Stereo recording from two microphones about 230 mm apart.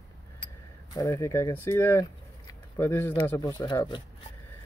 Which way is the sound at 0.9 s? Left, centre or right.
Centre.